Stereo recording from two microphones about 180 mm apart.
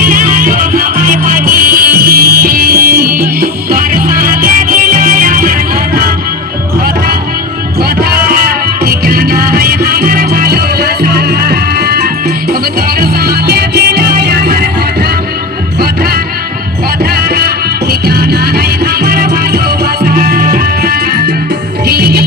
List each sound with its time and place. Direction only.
0.0 s music: 50° right (ahead or behind)
7.8 s music: 60° right (ahead or behind)
15.8 s music: 60° right (ahead or behind)